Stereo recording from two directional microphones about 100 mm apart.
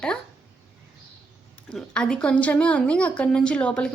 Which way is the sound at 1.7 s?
10° left (ahead or behind).